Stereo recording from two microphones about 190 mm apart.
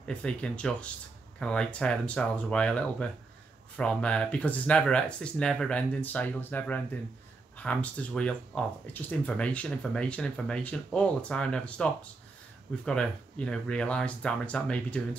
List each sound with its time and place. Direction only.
0.0 s speech: 5° left (ahead or behind)